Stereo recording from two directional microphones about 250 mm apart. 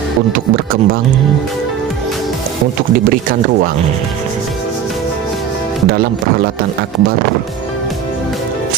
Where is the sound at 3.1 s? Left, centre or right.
Right.